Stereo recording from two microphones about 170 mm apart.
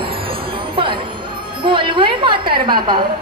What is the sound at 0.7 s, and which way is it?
Speech, 30° right (ahead or behind).